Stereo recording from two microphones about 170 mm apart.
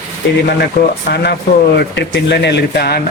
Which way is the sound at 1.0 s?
75° left (ahead or behind).